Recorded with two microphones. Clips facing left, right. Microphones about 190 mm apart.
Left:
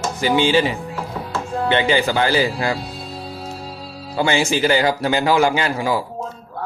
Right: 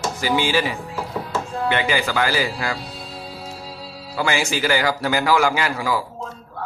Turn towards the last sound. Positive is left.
turn(degrees=25)  # may be behind; listen again after turning